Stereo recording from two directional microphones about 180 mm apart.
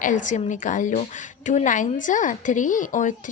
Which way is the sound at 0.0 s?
45° left (ahead or behind).